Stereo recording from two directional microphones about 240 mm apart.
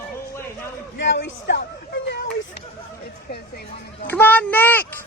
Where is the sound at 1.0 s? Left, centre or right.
Left.